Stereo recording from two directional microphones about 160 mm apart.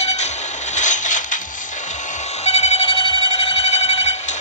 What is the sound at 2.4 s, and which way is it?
Alarm clock, 40° left (ahead or behind).